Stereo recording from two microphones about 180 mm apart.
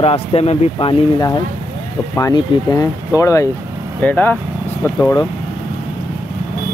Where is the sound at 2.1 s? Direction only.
20° left (ahead or behind).